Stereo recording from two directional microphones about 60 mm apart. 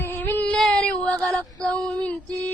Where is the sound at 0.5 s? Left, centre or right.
Centre.